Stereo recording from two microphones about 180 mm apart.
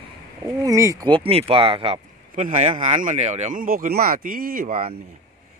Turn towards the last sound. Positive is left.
turn(degrees=-35)  # may be behind; listen again after turning